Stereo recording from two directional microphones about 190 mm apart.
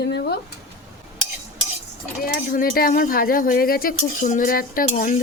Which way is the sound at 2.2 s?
50° left (ahead or behind).